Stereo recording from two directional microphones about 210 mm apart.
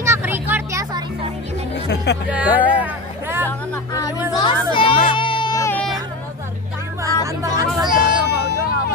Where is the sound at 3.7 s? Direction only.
15° left (ahead or behind).